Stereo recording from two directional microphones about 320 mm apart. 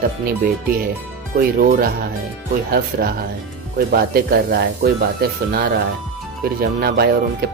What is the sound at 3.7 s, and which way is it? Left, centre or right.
Speech, right.